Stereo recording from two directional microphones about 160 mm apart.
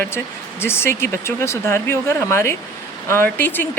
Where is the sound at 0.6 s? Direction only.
15° left (ahead or behind).